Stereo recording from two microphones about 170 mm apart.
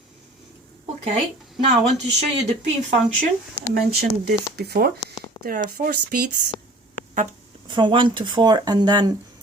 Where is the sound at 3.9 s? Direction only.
70° right (ahead or behind).